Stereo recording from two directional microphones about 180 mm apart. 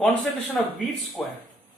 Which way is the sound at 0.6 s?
Centre (ahead or behind).